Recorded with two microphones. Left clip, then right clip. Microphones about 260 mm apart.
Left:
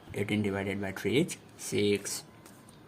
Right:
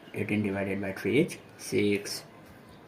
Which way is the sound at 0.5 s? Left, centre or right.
Left.